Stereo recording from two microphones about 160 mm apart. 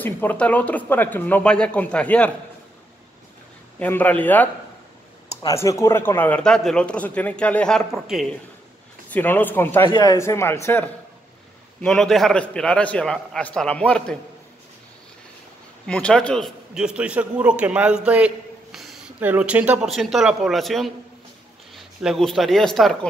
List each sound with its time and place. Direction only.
0.0 s speech: 10° left (ahead or behind)
3.8 s speech: 10° left (ahead or behind)
9.1 s speech: 10° left (ahead or behind)
9.8 s speech: 30° left (ahead or behind)
10.1 s speech: 15° left (ahead or behind)
11.8 s a man's voice: centre (ahead or behind)
15.9 s a man's voice: 5° left (ahead or behind)